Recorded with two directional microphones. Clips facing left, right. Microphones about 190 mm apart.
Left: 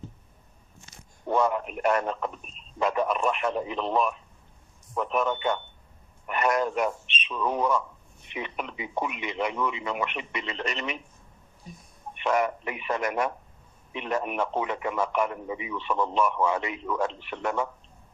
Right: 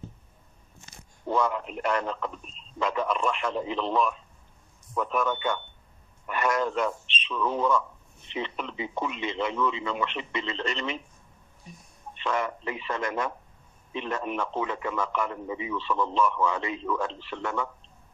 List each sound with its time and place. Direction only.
1.4 s a man's voice: 20° left (ahead or behind)
12.1 s a man's voice: 20° left (ahead or behind)